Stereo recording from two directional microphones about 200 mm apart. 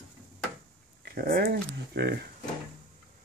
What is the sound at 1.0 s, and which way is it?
Speech, 45° right (ahead or behind).